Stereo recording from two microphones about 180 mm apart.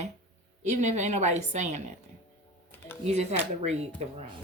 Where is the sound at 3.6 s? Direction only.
35° right (ahead or behind).